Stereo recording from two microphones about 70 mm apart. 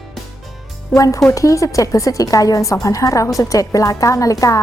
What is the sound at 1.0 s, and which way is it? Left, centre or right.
Speech, left.